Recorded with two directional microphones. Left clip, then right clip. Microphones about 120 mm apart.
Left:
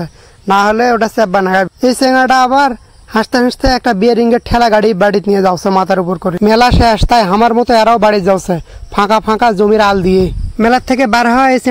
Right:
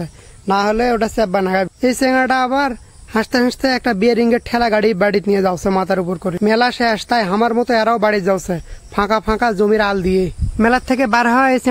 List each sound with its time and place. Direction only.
0.0 s a man's voice: 30° left (ahead or behind)
6.4 s speech: 50° left (ahead or behind); by 11.7 s 30° left (ahead or behind)